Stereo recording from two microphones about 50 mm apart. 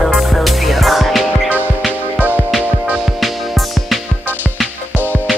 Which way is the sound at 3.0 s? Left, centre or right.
Centre.